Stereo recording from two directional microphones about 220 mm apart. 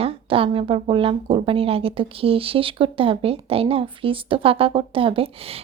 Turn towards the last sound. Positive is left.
turn(degrees=-25)  # may be behind; listen again after turning